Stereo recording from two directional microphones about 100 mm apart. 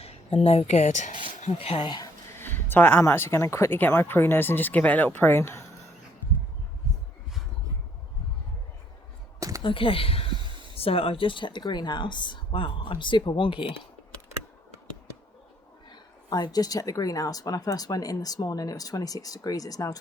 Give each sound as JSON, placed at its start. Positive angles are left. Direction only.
{"t": 0.4, "sound": "speech", "side_deg": 90}
{"t": 2.3, "sound": "speech", "side_deg": 20}
{"t": 9.6, "sound": "speech", "side_deg": 60}
{"t": 16.3, "sound": "speech", "side_deg": 40}